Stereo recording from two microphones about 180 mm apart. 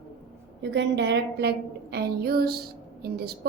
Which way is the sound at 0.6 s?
75° right (ahead or behind).